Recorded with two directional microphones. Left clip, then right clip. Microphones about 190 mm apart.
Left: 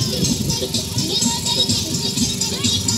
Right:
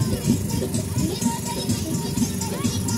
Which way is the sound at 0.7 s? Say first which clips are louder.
Left 7 dB; 20° right (ahead or behind).